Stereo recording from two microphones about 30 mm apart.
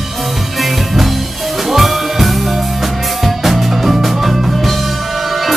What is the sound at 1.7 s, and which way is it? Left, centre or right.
Music, centre.